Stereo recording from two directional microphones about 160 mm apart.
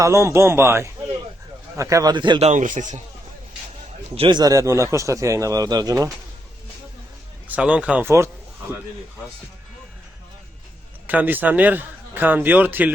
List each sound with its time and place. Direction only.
0.0 s a man's voice: 20° right (ahead or behind)
2.4 s speech: 50° right (ahead or behind)
4.1 s speech: 35° right (ahead or behind)
7.4 s a man's voice: 10° right (ahead or behind)
11.0 s a man's voice: 10° right (ahead or behind)